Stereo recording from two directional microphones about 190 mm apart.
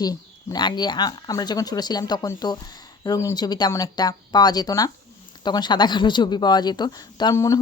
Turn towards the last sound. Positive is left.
turn(degrees=15)  # may be behind; listen again after turning